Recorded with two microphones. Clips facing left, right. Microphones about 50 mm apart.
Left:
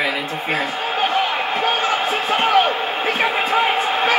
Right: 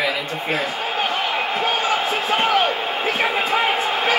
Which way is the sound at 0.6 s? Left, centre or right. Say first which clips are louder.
Left 2 dB; left.